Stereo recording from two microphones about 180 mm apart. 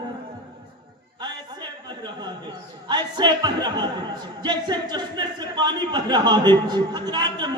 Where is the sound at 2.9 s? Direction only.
25° right (ahead or behind).